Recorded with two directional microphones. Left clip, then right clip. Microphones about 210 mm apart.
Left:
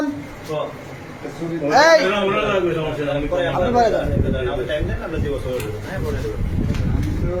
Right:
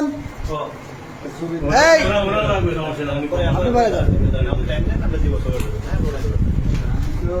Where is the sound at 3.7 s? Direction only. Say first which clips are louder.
Even; 25° right (ahead or behind).